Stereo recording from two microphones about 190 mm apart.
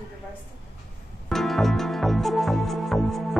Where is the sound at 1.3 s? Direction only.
Centre (ahead or behind).